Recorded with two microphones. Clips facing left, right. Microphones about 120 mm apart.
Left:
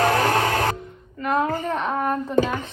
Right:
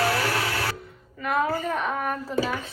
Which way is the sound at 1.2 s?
20° left (ahead or behind).